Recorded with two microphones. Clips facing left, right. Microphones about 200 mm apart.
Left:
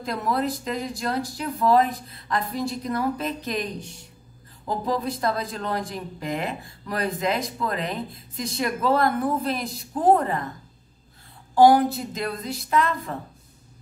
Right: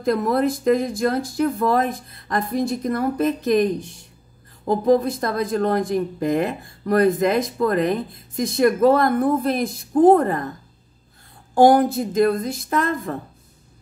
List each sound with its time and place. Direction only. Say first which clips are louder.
0.0 s speech: right 7 dB; 50° right (ahead or behind)
4.6 s speech: right 9 dB; 50° right (ahead or behind)
11.5 s speech: right 2 dB; 50° right (ahead or behind)